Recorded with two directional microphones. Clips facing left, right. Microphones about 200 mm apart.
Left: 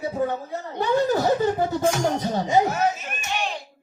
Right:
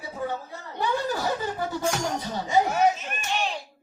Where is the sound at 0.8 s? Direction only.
45° left (ahead or behind).